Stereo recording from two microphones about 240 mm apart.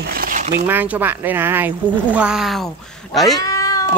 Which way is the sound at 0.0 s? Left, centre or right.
Right.